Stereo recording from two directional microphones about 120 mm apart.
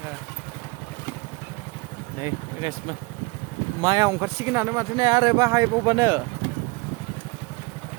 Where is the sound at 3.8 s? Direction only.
30° right (ahead or behind).